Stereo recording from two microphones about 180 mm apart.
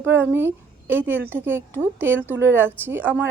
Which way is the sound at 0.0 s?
10° right (ahead or behind).